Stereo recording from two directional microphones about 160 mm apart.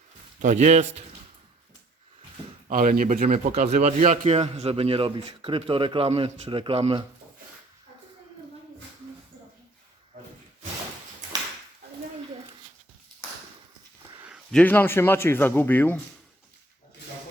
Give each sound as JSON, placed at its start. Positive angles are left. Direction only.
{"t": 0.4, "sound": "a man's voice", "side_deg": -50}
{"t": 2.6, "sound": "a man's voice", "side_deg": -60}
{"t": 14.5, "sound": "speech", "side_deg": 10}